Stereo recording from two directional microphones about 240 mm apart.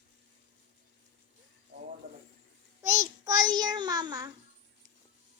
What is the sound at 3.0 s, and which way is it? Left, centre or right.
Child singing, centre.